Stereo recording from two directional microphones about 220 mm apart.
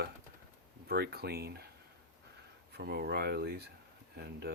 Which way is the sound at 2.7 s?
45° right (ahead or behind).